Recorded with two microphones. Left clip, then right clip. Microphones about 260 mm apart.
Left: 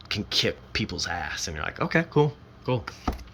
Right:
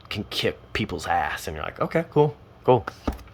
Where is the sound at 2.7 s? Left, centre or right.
Centre.